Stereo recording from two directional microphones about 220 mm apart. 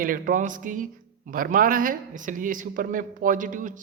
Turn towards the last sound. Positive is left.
turn(degrees=-35)  # may be behind; listen again after turning